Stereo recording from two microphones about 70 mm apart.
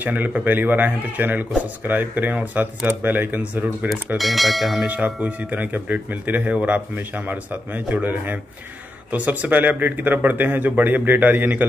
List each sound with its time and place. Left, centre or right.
0.0 s speech: right
4.2 s speech: centre
4.8 s speech: right